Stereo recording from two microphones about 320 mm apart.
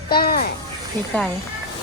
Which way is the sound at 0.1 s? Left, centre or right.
Left.